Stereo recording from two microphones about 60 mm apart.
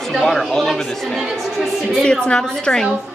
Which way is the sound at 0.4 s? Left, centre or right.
Centre.